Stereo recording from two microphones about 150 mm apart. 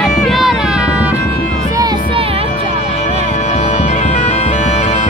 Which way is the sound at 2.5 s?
60° left (ahead or behind).